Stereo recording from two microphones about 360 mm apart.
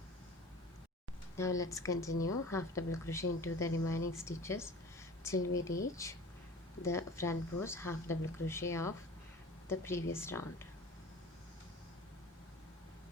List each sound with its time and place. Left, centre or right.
1.4 s speech: centre